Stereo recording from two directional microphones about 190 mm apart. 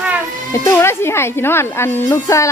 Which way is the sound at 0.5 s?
15° left (ahead or behind).